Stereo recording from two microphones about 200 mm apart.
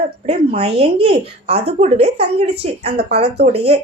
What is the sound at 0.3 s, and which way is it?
A woman's voice, 30° right (ahead or behind).